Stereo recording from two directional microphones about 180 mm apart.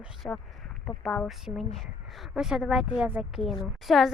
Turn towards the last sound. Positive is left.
turn(degrees=0)  # may be behind; listen again after turning